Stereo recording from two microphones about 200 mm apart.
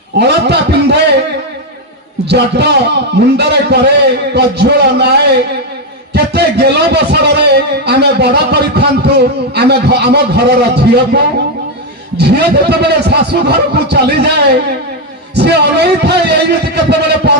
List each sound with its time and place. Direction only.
0.2 s a man's voice: 55° right (ahead or behind)
2.3 s a man's voice: 55° right (ahead or behind)